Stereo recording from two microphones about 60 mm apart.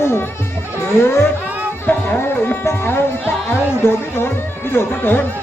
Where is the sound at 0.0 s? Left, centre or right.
Left.